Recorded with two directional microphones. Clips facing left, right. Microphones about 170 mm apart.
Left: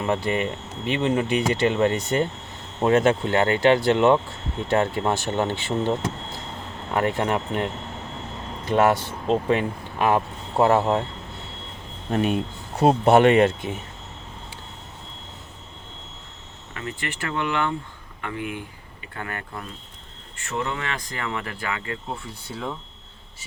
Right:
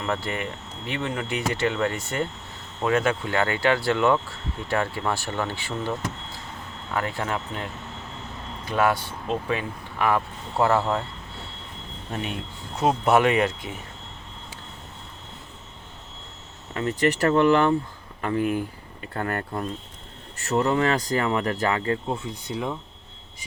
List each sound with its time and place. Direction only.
0.9 s speech: 20° left (ahead or behind)
8.6 s speech: 25° left (ahead or behind)
12.8 s speech: 30° left (ahead or behind)
16.7 s speech: 40° right (ahead or behind)
22.4 s speech: 15° right (ahead or behind)